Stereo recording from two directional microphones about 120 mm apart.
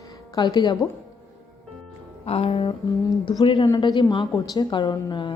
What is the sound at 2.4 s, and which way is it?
A woman's voice, 45° left (ahead or behind).